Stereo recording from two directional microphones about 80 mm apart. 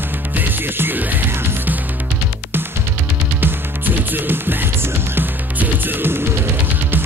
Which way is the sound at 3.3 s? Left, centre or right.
Right.